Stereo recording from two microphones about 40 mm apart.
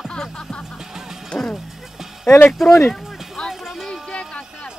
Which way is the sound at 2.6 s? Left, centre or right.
Centre.